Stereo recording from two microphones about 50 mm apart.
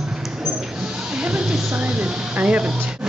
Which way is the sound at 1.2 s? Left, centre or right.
Centre.